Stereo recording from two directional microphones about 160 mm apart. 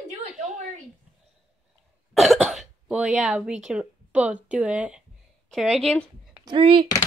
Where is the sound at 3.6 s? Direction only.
5° right (ahead or behind).